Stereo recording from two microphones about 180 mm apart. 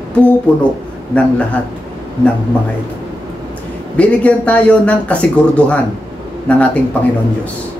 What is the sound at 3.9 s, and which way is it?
Speech, 5° left (ahead or behind).